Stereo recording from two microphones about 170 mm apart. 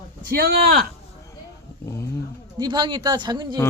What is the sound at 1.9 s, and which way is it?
Speech, 15° left (ahead or behind).